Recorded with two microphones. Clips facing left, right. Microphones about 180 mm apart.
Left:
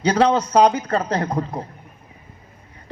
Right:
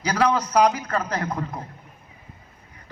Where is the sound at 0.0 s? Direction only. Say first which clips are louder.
Left 5 dB; 30° left (ahead or behind).